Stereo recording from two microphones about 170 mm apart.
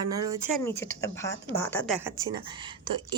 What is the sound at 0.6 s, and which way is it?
Speech, 15° left (ahead or behind).